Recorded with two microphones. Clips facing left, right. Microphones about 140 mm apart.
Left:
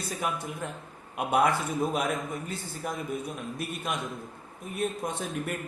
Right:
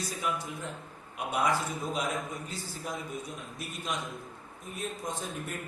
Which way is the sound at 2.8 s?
55° left (ahead or behind).